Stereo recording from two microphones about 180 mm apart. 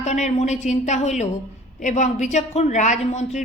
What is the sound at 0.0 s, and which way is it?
Speech, 40° left (ahead or behind).